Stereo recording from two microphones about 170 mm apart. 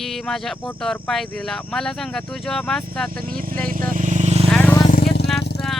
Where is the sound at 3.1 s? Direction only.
60° right (ahead or behind).